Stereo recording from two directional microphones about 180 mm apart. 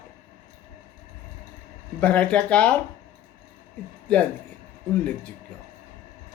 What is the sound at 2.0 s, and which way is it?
Speech, 5° left (ahead or behind).